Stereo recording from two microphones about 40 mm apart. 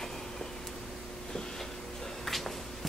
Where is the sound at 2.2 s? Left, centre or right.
Centre.